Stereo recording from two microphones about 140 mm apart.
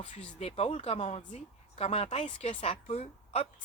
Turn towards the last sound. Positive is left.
turn(degrees=50)  # may be behind; listen again after turning